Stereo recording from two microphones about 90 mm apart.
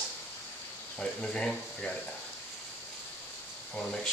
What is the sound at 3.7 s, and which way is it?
Speech, 5° left (ahead or behind).